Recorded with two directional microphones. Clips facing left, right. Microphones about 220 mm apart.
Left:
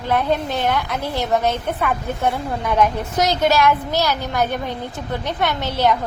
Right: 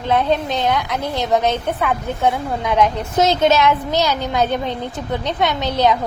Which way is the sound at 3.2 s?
25° right (ahead or behind).